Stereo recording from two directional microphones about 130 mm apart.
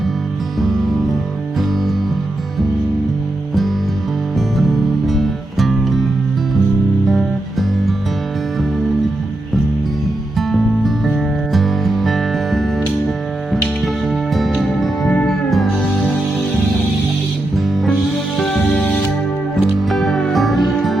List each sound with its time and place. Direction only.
0.6 s music: centre (ahead or behind)
4.4 s music: centre (ahead or behind)
7.1 s music: centre (ahead or behind)
10.3 s music: centre (ahead or behind)
14.3 s music: centre (ahead or behind)
18.3 s music: centre (ahead or behind)